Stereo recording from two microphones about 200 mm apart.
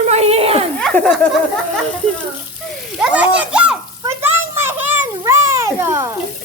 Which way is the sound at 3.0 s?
5° right (ahead or behind).